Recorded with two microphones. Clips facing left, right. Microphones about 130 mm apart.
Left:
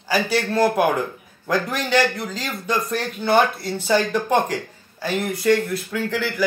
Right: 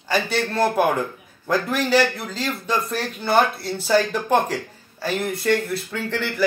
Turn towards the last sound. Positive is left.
turn(degrees=5)  # may be behind; listen again after turning